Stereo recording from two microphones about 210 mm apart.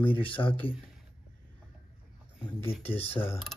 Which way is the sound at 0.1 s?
25° left (ahead or behind).